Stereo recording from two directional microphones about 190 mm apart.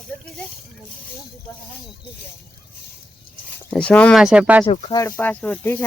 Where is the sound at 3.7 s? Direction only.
5° left (ahead or behind).